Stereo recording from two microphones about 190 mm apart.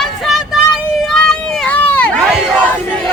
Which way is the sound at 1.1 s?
5° left (ahead or behind).